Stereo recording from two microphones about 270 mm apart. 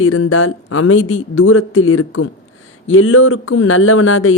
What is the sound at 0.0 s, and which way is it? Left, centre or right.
Speech, left.